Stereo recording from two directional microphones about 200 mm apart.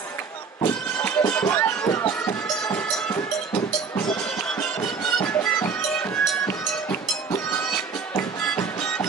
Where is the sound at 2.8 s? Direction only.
10° left (ahead or behind).